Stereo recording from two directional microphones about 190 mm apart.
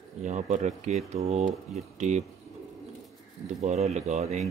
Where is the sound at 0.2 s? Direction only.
40° right (ahead or behind).